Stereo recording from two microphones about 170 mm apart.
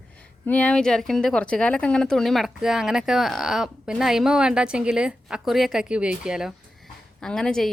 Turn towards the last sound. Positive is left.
turn(degrees=5)  # may be behind; listen again after turning